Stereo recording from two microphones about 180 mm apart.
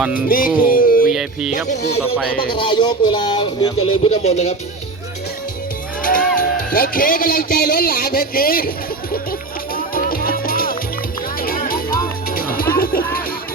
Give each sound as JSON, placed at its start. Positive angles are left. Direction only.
{"t": 0.1, "sound": "music", "side_deg": 50}
{"t": 1.1, "sound": "speech", "side_deg": -5}
{"t": 2.5, "sound": "speech", "side_deg": 25}
{"t": 6.0, "sound": "a man's voice", "side_deg": 50}
{"t": 9.7, "sound": "music", "side_deg": 55}